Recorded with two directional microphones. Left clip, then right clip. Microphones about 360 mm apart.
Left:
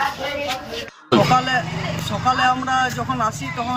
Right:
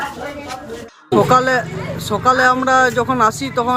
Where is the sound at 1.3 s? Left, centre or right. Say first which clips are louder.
Right 4 dB; centre.